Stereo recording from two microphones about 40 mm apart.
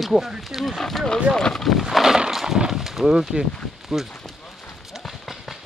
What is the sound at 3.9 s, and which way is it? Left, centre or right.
Speech, centre.